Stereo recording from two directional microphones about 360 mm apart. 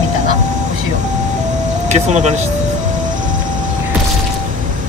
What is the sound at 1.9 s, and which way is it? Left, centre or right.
Speech, centre.